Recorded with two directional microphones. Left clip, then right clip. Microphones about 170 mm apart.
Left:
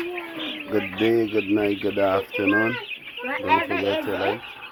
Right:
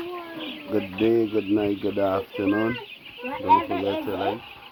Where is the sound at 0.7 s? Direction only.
20° left (ahead or behind).